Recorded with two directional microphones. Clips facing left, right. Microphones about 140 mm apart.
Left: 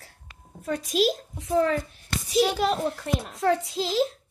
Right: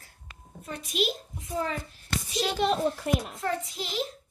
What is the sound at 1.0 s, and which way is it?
Speech, 85° left.